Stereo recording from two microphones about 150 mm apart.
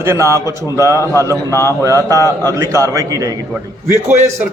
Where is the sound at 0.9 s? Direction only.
20° left (ahead or behind).